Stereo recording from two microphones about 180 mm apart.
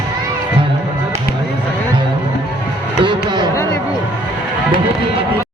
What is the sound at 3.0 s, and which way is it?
Music, 25° right (ahead or behind).